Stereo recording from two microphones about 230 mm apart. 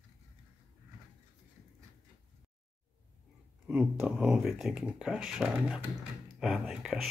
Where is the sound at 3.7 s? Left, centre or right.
Centre.